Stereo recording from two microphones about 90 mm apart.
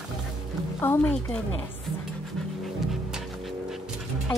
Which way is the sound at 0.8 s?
25° left (ahead or behind).